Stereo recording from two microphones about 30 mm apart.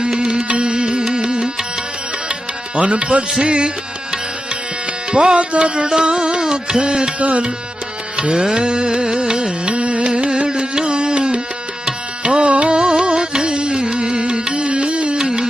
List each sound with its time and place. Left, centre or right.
0.0 s music: right
0.4 s music: right
2.7 s music: right
5.1 s music: right
7.2 s music: right
8.3 s music: right
9.7 s carnatic music: right
10.1 s carnatic music: right
11.9 s music: right
12.7 s music: right
15.2 s music: right